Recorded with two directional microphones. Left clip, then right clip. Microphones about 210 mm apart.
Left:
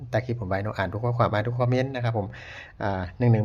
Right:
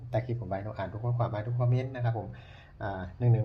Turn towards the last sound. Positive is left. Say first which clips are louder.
# left 8 dB
turn(degrees=40)  # may be behind; listen again after turning